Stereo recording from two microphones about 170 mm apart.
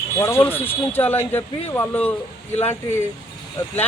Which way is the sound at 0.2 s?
15° left (ahead or behind).